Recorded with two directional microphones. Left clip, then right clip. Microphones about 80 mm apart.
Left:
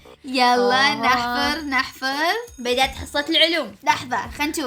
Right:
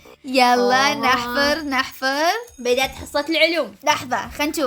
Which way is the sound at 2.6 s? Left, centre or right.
Left.